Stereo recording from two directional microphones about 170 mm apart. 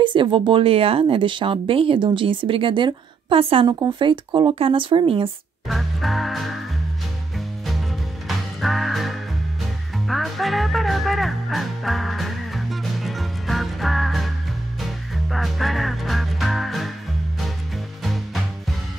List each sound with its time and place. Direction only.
0.0 s speech: 30° right (ahead or behind)
5.7 s music: centre (ahead or behind)
18.0 s music: centre (ahead or behind)